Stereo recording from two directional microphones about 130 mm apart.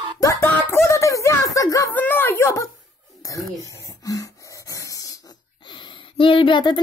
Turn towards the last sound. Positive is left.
turn(degrees=35)  # may be behind; listen again after turning